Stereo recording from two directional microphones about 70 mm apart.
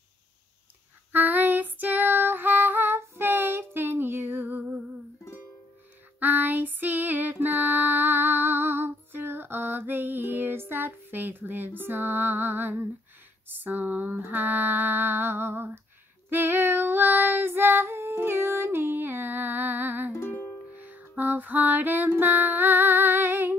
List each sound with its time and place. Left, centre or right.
1.1 s female singing: right
6.1 s female singing: right
20.8 s music: right